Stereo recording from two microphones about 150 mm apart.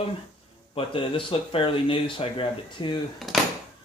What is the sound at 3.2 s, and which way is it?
Speech, centre (ahead or behind).